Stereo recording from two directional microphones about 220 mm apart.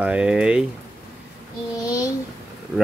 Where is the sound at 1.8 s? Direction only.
15° left (ahead or behind).